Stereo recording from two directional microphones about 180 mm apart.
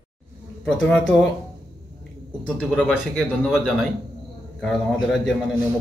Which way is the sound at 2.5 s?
5° left (ahead or behind).